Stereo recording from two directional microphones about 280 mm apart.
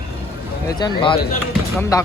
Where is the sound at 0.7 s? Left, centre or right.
Centre.